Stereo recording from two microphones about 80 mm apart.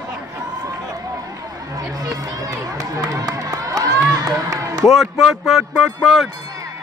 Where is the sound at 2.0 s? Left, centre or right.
Right.